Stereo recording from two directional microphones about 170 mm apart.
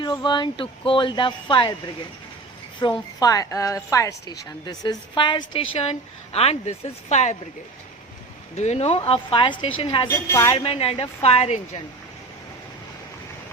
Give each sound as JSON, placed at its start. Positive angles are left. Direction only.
{"t": 0.0, "sound": "a woman's voice", "side_deg": 25}
{"t": 2.8, "sound": "a woman's voice", "side_deg": 25}
{"t": 8.5, "sound": "a woman's voice", "side_deg": 40}
{"t": 10.1, "sound": "a woman's voice", "side_deg": 20}
{"t": 10.5, "sound": "a woman's voice", "side_deg": 35}